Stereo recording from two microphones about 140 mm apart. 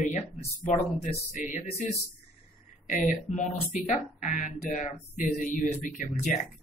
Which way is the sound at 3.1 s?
65° left (ahead or behind).